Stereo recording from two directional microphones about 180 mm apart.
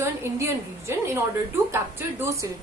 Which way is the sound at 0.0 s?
15° right (ahead or behind).